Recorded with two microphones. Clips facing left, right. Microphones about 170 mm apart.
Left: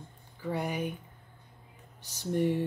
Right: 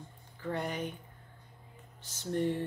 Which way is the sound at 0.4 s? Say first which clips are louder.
Left 3 dB; 10° left (ahead or behind).